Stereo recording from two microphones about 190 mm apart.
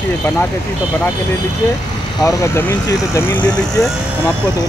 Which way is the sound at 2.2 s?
15° left (ahead or behind).